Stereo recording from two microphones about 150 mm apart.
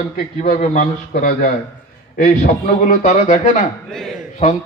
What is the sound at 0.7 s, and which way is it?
Speech, 55° left (ahead or behind).